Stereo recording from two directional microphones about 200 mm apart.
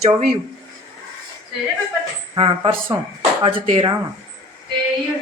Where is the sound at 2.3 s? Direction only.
25° right (ahead or behind).